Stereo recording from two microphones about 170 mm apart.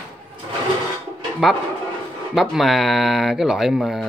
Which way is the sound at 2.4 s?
Centre (ahead or behind).